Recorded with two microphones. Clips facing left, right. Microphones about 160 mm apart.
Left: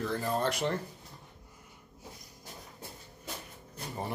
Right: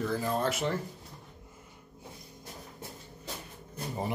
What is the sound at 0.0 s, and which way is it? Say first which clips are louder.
Speech: right 1 dB; centre (ahead or behind).